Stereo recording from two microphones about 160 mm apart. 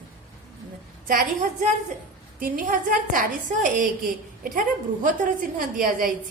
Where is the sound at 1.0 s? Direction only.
55° right (ahead or behind).